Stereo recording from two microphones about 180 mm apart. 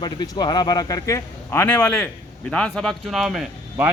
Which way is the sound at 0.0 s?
25° left (ahead or behind).